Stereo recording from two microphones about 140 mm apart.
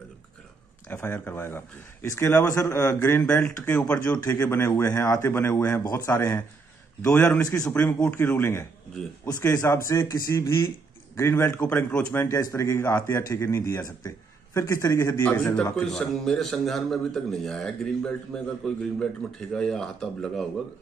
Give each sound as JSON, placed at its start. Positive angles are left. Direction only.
{"t": 0.8, "sound": "a man's voice", "side_deg": 15}